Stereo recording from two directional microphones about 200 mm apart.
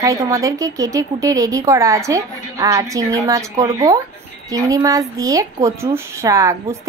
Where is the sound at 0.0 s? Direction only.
15° right (ahead or behind).